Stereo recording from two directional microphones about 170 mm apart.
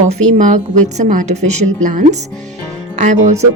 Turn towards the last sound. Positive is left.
turn(degrees=-45)  # may be behind; listen again after turning